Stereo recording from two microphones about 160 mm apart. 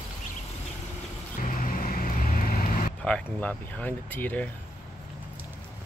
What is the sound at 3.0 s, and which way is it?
Speech, 5° left (ahead or behind).